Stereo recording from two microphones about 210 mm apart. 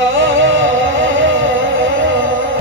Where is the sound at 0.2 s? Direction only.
65° right (ahead or behind).